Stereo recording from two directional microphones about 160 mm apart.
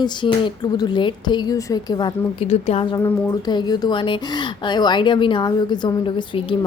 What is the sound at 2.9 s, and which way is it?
A woman's voice, 20° left (ahead or behind).